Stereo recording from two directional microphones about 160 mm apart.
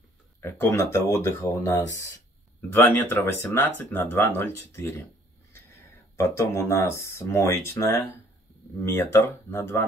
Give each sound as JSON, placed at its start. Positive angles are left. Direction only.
{"t": 0.4, "sound": "speech", "side_deg": 15}
{"t": 6.1, "sound": "speech", "side_deg": 20}